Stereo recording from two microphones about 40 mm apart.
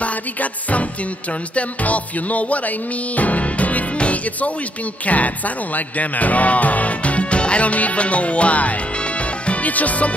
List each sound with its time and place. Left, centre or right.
0.0 s music: left